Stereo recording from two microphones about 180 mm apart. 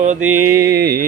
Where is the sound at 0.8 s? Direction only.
60° right (ahead or behind).